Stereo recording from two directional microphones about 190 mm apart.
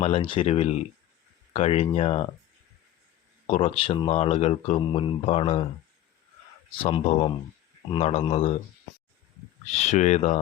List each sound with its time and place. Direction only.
0.0 s speech: 30° left (ahead or behind)
3.4 s speech: 30° left (ahead or behind)
6.8 s speech: 30° left (ahead or behind)
9.7 s speech: 40° left (ahead or behind)